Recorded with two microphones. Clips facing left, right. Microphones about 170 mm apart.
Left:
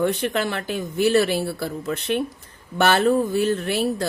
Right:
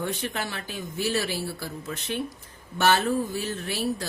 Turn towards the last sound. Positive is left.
turn(degrees=60)  # may be behind; listen again after turning